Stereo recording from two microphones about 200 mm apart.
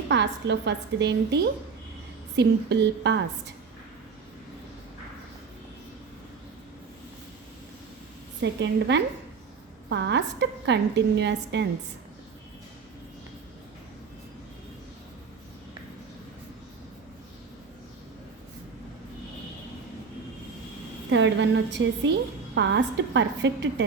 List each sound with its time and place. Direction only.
0.1 s a woman's voice: 60° right (ahead or behind)
8.4 s a woman's voice: 60° right (ahead or behind)
21.1 s a woman's voice: 65° right (ahead or behind)